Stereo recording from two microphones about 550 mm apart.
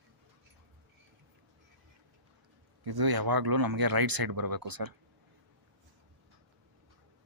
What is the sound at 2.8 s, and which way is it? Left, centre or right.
Speech, right.